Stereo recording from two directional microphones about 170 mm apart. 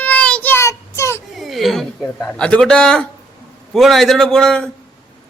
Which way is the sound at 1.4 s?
Centre (ahead or behind).